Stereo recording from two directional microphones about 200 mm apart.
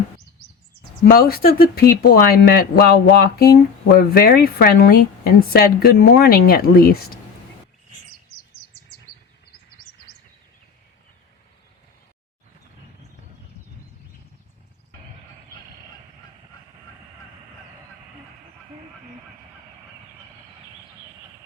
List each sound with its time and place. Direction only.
1.0 s speech: 50° left (ahead or behind)